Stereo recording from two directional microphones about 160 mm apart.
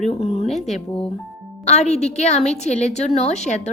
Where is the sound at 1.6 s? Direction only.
45° left (ahead or behind).